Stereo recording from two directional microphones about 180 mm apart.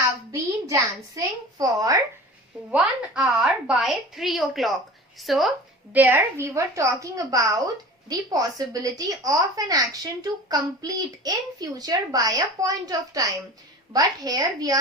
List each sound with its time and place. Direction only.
0.3 s a child's voice: 20° right (ahead or behind)
2.6 s a woman's voice: 5° right (ahead or behind)